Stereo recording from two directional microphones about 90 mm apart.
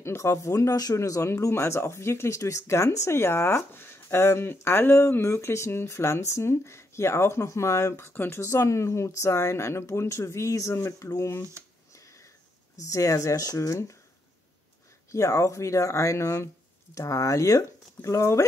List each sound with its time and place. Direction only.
0.0 s speech: 30° left (ahead or behind)
12.9 s speech: 40° left (ahead or behind)
15.0 s speech: 35° left (ahead or behind)